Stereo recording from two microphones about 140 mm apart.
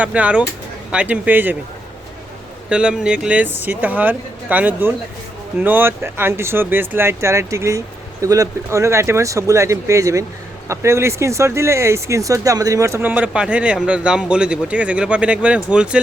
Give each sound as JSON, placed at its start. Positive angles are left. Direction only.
{"t": 0.0, "sound": "speech", "side_deg": -10}
{"t": 2.6, "sound": "speech", "side_deg": -5}